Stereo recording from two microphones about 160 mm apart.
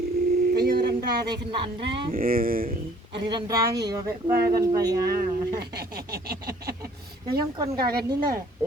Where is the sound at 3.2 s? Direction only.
25° right (ahead or behind).